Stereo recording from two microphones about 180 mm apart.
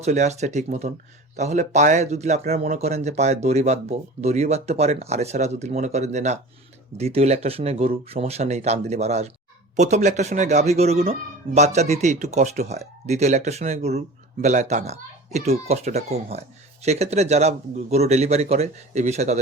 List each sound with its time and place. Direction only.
0.0 s speech: 40° right (ahead or behind)